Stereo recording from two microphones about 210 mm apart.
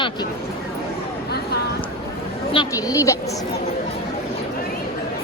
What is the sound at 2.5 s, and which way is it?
Speech, 20° left (ahead or behind).